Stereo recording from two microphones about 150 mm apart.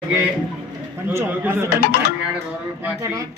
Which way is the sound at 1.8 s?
90° left.